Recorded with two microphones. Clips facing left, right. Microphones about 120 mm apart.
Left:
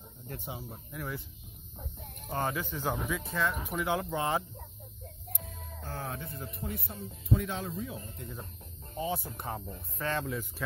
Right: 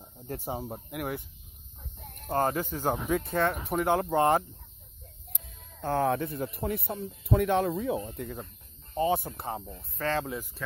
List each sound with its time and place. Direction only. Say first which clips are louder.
0.3 s speech: right 7 dB; 40° right (ahead or behind)
0.7 s speech: right 6 dB; 60° right (ahead or behind)
2.2 s speech: right 6 dB; 45° right (ahead or behind)
5.3 s speech: left 7 dB; 65° right (ahead or behind)
9.9 s speech: right 3 dB; 35° right (ahead or behind)